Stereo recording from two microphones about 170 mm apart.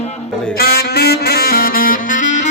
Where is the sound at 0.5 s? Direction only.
65° left (ahead or behind); by 2.5 s 45° left (ahead or behind).